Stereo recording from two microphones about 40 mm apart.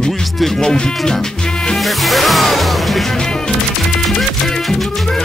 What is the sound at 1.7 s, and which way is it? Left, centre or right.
Music, centre.